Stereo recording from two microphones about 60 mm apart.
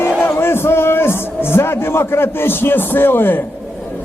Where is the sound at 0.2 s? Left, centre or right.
Left.